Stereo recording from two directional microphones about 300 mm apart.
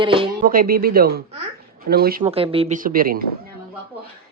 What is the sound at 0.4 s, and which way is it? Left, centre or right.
A man's voice, right.